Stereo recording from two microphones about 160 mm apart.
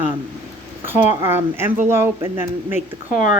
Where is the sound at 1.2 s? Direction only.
15° right (ahead or behind).